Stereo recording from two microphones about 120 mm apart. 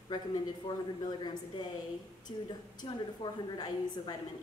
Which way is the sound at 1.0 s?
35° left (ahead or behind).